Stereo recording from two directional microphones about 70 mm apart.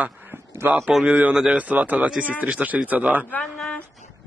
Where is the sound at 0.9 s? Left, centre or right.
Centre.